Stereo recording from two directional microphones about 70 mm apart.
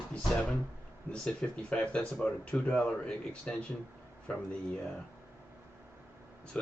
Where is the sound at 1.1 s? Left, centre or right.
Centre.